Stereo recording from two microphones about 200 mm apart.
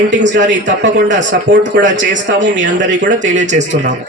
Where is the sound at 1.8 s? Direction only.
40° right (ahead or behind).